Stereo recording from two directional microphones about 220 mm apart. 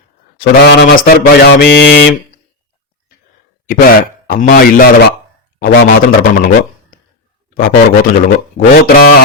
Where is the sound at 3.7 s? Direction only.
40° left (ahead or behind).